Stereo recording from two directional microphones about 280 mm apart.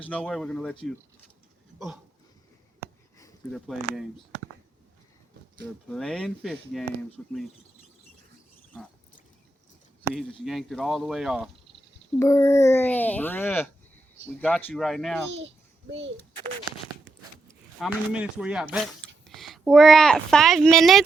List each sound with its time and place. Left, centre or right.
0.0 s speech: centre
3.5 s speech: centre
5.9 s speech: centre
10.0 s speech: centre
12.2 s a child's voice: centre
15.4 s a sound: right
17.5 s speech: centre